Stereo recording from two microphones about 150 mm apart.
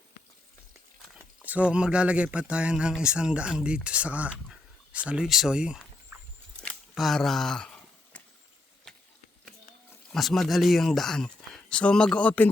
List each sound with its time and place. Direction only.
1.5 s speech: 10° right (ahead or behind)
10.1 s speech: centre (ahead or behind)